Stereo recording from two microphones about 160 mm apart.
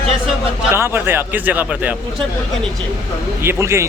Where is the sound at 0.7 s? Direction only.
15° right (ahead or behind).